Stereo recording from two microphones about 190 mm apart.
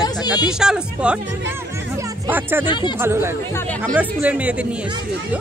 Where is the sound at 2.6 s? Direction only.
25° left (ahead or behind).